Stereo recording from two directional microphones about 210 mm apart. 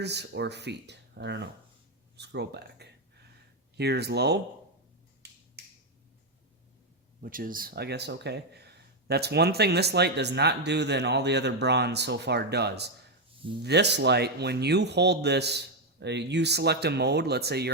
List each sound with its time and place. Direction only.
0.0 s speech: 55° right (ahead or behind)
7.2 s speech: 40° right (ahead or behind)